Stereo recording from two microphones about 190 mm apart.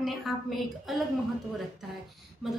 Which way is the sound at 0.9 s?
Centre (ahead or behind).